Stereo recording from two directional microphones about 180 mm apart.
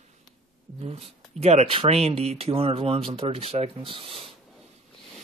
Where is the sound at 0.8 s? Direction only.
35° right (ahead or behind).